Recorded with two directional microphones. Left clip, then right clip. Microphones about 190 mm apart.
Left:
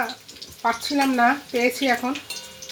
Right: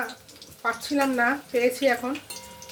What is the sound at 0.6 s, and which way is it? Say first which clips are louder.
Cutlery: left 3 dB; 40° left (ahead or behind).